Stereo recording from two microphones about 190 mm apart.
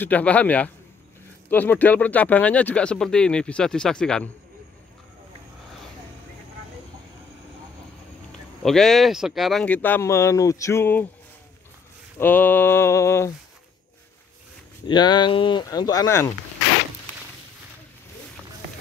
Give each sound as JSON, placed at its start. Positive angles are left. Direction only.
{"t": 0.0, "sound": "speech", "side_deg": 5}
{"t": 8.3, "sound": "speech", "side_deg": 0}
{"t": 12.2, "sound": "speech", "side_deg": 10}
{"t": 14.9, "sound": "speech", "side_deg": 25}